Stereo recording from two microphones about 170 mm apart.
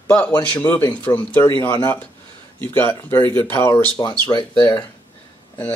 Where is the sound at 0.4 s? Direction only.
10° left (ahead or behind).